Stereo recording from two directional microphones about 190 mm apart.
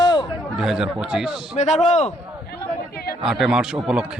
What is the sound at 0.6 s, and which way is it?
A man's voice, 5° right (ahead or behind).